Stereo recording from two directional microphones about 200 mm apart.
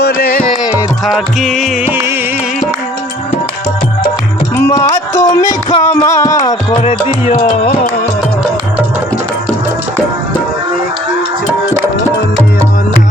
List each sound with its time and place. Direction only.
0.0 s music: 50° left (ahead or behind)
0.7 s music: centre (ahead or behind)
4.5 s music: 15° left (ahead or behind)
6.8 s music: 30° left (ahead or behind)